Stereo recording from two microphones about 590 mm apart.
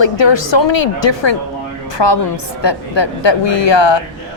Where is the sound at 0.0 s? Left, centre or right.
Left.